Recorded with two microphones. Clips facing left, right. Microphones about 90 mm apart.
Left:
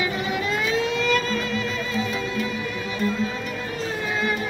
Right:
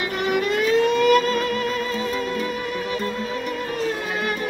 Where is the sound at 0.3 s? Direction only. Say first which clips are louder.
Right 8 dB; 55° right (ahead or behind).